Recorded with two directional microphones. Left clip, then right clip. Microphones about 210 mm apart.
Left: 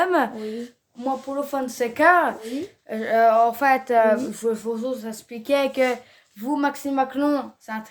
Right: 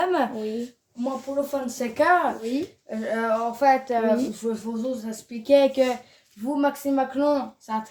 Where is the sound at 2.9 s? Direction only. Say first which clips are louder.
Left 8 dB; 60° left (ahead or behind).